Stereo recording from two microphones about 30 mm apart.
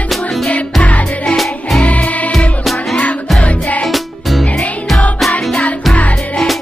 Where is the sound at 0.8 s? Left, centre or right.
Left.